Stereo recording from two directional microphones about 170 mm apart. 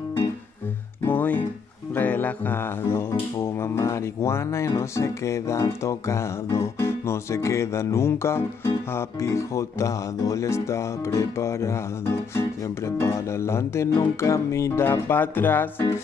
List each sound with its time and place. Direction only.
1.0 s music: 10° left (ahead or behind)